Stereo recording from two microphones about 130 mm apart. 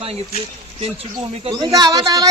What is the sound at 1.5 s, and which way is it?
Speech, 30° right (ahead or behind).